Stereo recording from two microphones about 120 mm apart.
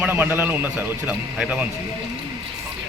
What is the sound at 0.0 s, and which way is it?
A man's voice, 15° right (ahead or behind).